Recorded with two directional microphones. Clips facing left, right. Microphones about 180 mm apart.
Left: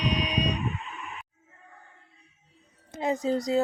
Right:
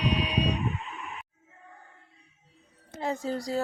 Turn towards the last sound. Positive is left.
turn(degrees=20)  # may be behind; listen again after turning